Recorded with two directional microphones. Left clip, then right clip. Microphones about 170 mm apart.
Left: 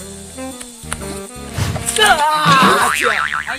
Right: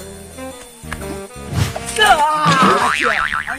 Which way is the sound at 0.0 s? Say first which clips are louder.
Left 1 dB; centre (ahead or behind).